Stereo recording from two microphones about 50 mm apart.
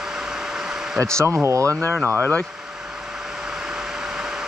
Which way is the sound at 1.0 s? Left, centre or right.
Right.